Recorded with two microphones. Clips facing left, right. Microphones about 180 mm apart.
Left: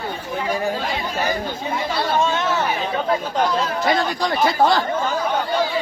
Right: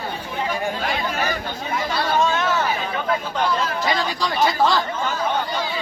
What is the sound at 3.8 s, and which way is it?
Speech, 50° left (ahead or behind).